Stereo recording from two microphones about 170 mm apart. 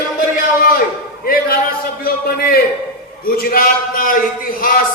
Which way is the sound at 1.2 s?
60° left (ahead or behind).